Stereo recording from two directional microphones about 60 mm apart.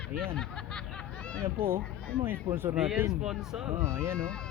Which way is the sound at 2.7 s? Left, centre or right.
Centre.